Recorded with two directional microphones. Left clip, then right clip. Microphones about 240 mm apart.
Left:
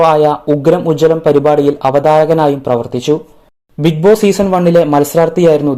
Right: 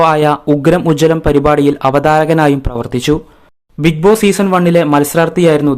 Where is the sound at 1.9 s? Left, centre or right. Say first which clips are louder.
Left 2 dB; right.